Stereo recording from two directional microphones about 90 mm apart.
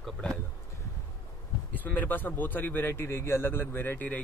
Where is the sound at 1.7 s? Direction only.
20° left (ahead or behind).